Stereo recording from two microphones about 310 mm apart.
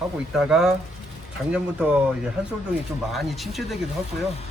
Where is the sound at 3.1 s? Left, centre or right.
Centre.